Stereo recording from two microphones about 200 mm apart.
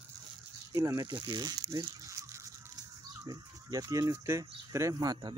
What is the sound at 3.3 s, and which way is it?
Speech, 20° right (ahead or behind).